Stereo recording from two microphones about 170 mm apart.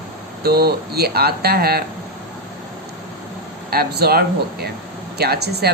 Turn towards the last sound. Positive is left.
turn(degrees=-70)  # may be behind; listen again after turning